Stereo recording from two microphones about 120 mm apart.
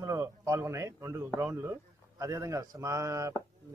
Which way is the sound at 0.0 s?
25° right (ahead or behind).